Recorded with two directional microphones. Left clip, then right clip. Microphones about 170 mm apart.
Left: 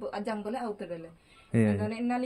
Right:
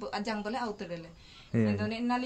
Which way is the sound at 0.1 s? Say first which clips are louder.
Even; 25° right (ahead or behind).